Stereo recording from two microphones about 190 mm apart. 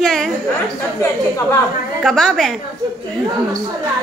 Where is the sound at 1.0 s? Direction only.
15° left (ahead or behind).